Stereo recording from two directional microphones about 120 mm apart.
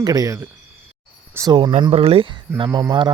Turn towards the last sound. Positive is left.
turn(degrees=-35)  # may be behind; listen again after turning